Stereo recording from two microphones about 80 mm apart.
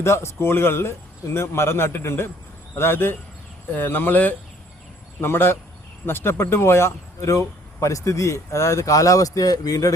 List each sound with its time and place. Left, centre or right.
0.0 s speech: left